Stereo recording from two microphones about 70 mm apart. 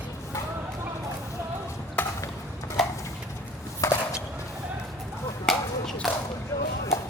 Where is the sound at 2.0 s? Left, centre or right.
Left.